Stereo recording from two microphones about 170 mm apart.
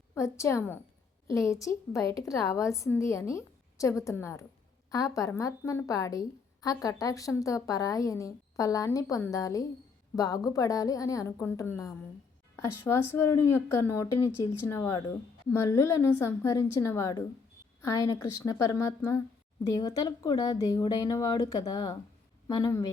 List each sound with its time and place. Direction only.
0.1 s a woman's voice: 15° left (ahead or behind)